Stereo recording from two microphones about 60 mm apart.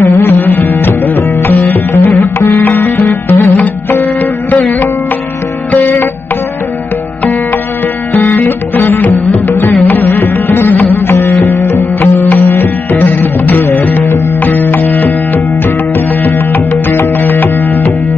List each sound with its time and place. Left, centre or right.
0.3 s music: left
2.4 s sitar: left
4.5 s music: left
8.1 s music: left
12.9 s music: left